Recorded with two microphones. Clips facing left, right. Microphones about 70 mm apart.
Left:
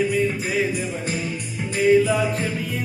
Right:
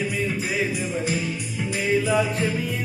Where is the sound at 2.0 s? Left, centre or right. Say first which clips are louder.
Left 1 dB; centre.